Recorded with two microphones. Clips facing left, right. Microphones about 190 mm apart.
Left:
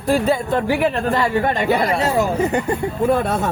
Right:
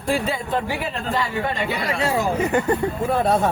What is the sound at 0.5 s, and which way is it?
Speech, 55° left (ahead or behind).